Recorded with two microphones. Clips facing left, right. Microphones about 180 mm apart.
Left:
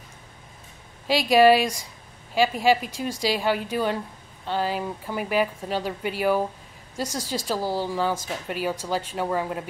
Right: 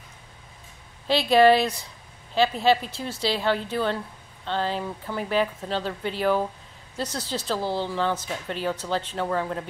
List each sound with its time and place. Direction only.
1.0 s a woman's voice: 10° left (ahead or behind)